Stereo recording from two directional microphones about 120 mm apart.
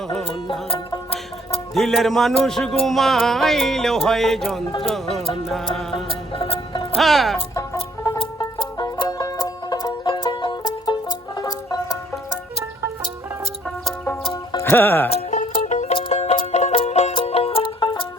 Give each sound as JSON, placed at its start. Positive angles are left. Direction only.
{"t": 1.7, "sound": "music", "side_deg": 5}
{"t": 6.1, "sound": "music", "side_deg": 50}
{"t": 6.9, "sound": "music", "side_deg": 0}
{"t": 7.5, "sound": "music", "side_deg": 25}
{"t": 11.3, "sound": "banjo", "side_deg": 30}
{"t": 14.5, "sound": "music", "side_deg": 20}
{"t": 15.1, "sound": "music", "side_deg": 90}
{"t": 16.5, "sound": "music", "side_deg": 70}
{"t": 17.2, "sound": "music", "side_deg": 55}